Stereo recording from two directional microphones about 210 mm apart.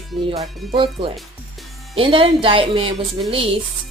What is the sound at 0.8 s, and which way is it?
Speech, 25° right (ahead or behind).